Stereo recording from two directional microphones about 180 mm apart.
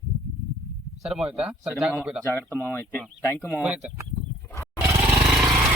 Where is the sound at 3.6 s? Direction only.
5° right (ahead or behind).